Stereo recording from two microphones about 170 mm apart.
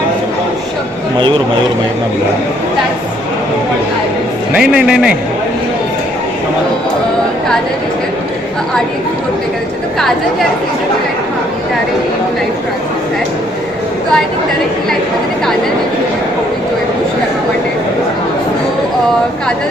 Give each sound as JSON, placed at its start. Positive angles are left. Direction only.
{"t": 4.5, "sound": "a man's voice", "side_deg": -5}